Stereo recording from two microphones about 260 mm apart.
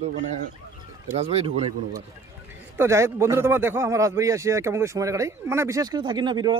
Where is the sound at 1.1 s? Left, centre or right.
Right.